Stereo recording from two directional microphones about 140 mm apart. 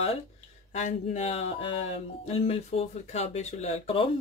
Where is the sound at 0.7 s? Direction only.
50° left (ahead or behind).